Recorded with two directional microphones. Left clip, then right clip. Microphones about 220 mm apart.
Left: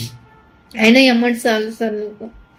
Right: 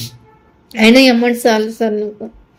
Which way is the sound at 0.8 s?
35° right (ahead or behind).